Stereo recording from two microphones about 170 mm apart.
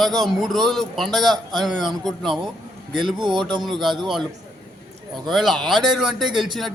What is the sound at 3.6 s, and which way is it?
Speech, centre (ahead or behind).